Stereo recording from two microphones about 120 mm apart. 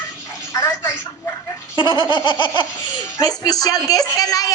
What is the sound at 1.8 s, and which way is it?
A woman's voice, 40° left (ahead or behind).